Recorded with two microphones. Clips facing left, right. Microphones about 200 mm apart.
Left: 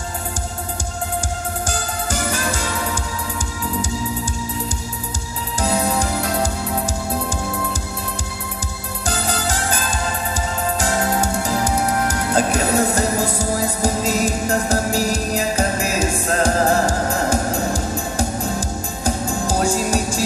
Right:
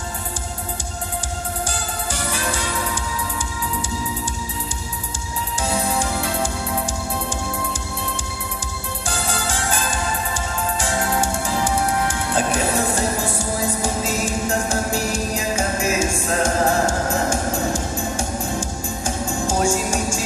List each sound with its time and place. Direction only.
1.7 s music: 45° left (ahead or behind)
5.6 s music: 40° left (ahead or behind)
9.0 s music: 40° left (ahead or behind)